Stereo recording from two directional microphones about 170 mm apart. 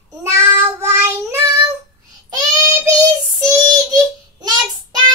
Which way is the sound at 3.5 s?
25° right (ahead or behind).